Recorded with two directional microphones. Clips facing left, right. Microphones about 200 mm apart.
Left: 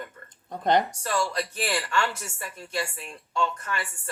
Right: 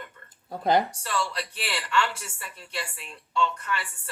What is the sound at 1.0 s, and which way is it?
A woman's voice, 45° left (ahead or behind).